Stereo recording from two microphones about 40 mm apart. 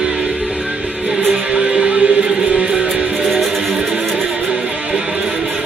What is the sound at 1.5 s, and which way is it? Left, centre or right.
Music, right.